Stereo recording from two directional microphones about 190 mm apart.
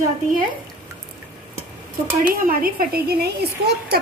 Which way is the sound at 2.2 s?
50° right (ahead or behind).